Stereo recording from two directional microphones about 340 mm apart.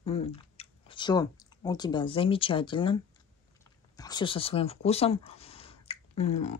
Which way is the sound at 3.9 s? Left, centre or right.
Centre.